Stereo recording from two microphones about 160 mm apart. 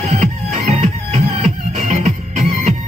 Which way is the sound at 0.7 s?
45° right (ahead or behind).